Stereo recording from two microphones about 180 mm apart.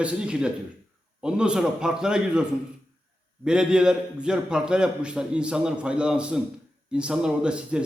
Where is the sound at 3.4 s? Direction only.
5° right (ahead or behind).